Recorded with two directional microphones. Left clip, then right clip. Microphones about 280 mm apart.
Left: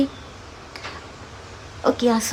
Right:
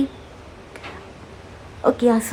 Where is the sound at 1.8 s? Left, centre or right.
Centre.